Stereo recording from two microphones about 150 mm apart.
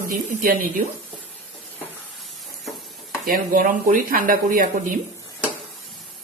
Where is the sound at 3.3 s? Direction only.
65° right (ahead or behind).